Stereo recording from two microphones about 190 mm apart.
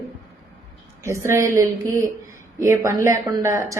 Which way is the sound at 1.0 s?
15° right (ahead or behind).